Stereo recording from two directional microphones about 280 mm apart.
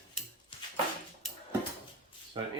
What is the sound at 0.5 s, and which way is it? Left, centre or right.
Dog, centre.